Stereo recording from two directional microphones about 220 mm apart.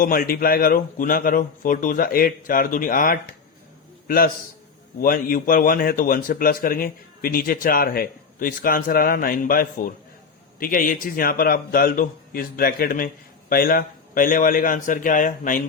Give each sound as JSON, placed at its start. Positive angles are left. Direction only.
{"t": 0.0, "sound": "a man's voice", "side_deg": 40}